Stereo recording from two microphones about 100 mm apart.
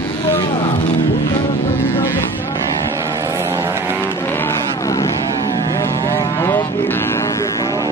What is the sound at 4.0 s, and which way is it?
Vehicle, 20° left (ahead or behind).